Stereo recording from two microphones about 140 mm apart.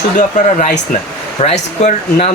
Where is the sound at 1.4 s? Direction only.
50° left (ahead or behind).